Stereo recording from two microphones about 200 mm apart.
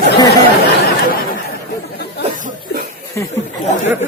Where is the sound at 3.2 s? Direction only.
10° left (ahead or behind).